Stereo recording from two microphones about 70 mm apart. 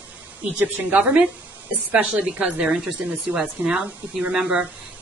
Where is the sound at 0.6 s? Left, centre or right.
Right.